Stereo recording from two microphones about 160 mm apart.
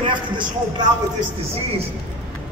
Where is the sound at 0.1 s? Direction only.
30° right (ahead or behind).